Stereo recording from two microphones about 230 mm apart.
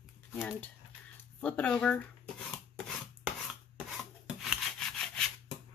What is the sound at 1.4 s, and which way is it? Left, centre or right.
Speech, centre.